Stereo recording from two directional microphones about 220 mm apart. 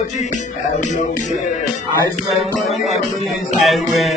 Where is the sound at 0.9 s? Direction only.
35° left (ahead or behind).